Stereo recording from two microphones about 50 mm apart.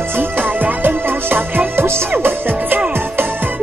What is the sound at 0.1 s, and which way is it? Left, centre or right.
Music, right.